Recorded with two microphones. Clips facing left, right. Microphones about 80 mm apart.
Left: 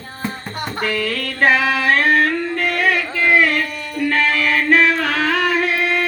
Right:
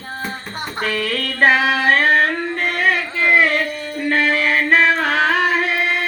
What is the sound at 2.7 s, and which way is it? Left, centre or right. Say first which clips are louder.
Music: right 1 dB; right.